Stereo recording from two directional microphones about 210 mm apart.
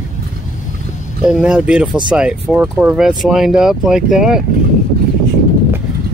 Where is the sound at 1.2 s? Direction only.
5° right (ahead or behind).